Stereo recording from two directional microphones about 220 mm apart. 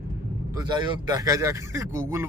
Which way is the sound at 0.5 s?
20° right (ahead or behind).